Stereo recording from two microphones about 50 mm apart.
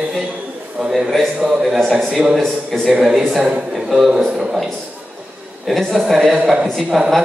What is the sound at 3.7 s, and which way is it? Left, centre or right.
Speech, centre.